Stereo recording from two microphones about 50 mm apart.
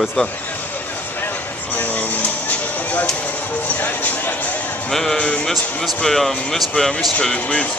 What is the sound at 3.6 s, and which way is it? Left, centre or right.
Music, left.